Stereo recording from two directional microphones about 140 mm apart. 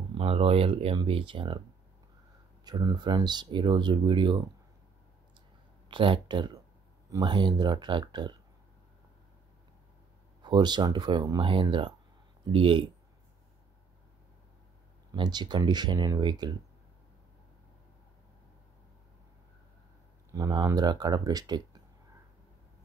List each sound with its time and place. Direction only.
0.1 s speech: 40° right (ahead or behind)
2.6 s speech: 30° right (ahead or behind)
5.9 s speech: 35° right (ahead or behind)
10.4 s speech: 30° right (ahead or behind)
15.0 s speech: 30° right (ahead or behind)
20.2 s speech: 25° right (ahead or behind)